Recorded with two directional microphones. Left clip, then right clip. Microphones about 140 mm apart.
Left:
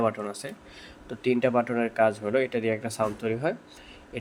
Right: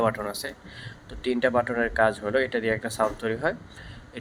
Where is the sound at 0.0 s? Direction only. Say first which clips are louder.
Right 2 dB; 10° left (ahead or behind).